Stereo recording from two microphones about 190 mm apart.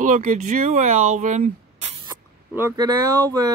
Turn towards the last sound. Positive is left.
turn(degrees=-20)  # may be behind; listen again after turning